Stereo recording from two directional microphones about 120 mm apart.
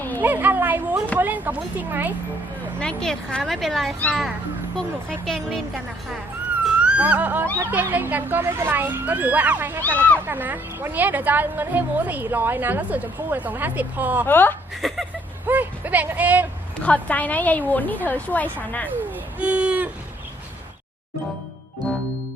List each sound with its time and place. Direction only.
0.2 s a sound: 15° right (ahead or behind)
1.2 s speech: 15° right (ahead or behind)
2.7 s speech: 5° left (ahead or behind)
6.7 s speech: 10° right (ahead or behind)
14.3 s a woman's voice: 15° left (ahead or behind)
14.8 s speech: centre (ahead or behind)
15.4 s speech: 15° right (ahead or behind)
16.8 s a woman's voice: 10° left (ahead or behind)
19.4 s a sound: 10° right (ahead or behind)